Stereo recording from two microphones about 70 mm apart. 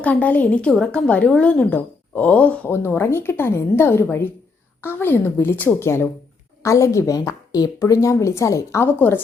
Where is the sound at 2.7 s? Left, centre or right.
Left.